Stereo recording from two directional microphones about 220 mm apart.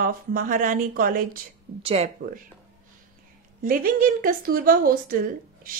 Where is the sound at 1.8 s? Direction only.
25° right (ahead or behind).